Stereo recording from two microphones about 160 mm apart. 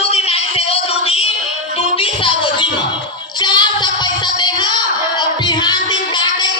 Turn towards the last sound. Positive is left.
turn(degrees=25)  # may be behind; listen again after turning